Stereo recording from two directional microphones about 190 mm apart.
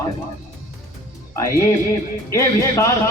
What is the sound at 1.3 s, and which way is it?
A man's voice, 15° left (ahead or behind).